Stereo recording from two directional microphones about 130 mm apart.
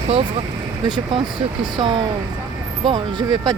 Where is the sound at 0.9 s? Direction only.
35° right (ahead or behind).